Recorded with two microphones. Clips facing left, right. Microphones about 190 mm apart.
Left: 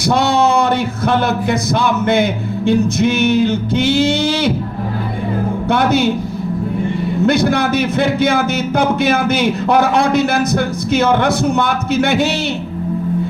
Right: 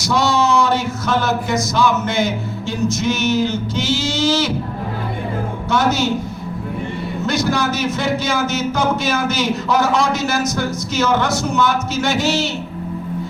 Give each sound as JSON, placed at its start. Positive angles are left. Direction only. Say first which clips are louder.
{"t": 0.0, "sound": "speech", "louder": "left 3 dB", "side_deg": 55}
{"t": 5.6, "sound": "a man's voice", "louder": "left 3 dB", "side_deg": 60}
{"t": 7.3, "sound": "speech", "louder": "left 4 dB", "side_deg": 60}